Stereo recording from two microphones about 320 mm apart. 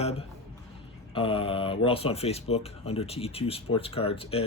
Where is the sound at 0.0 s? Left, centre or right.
Centre.